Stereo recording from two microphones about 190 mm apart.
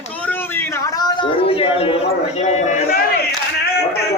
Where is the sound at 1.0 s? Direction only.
30° left (ahead or behind).